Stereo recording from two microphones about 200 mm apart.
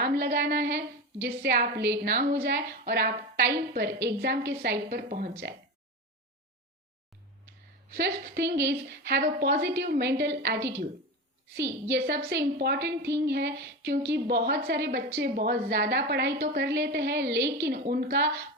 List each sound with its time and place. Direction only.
0.0 s a woman's voice: 55° right (ahead or behind)
7.4 s a woman's voice: 55° right (ahead or behind)